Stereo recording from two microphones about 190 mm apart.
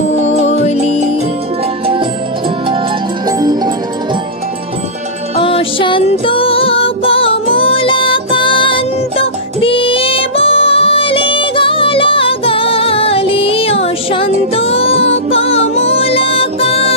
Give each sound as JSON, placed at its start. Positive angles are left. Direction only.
{"t": 3.3, "sound": "music", "side_deg": -20}
{"t": 5.3, "sound": "music", "side_deg": 30}